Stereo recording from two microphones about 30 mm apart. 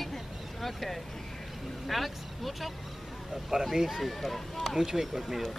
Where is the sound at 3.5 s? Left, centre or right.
Centre.